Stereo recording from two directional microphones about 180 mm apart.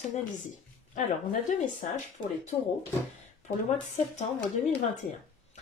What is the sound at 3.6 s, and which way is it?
Speech, 40° left (ahead or behind).